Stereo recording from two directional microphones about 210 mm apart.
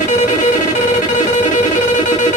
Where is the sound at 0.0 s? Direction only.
35° left (ahead or behind).